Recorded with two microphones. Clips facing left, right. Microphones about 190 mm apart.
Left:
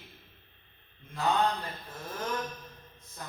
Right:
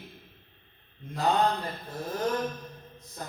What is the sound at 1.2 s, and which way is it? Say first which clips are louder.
A man's voice: right 3 dB; 40° right (ahead or behind).